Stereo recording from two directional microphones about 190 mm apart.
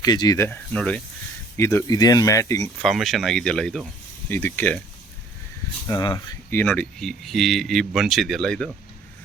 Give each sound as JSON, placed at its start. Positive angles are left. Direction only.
{"t": 0.0, "sound": "speech", "side_deg": 20}
{"t": 2.8, "sound": "speech", "side_deg": 0}
{"t": 5.9, "sound": "speech", "side_deg": 20}
{"t": 6.5, "sound": "speech", "side_deg": 10}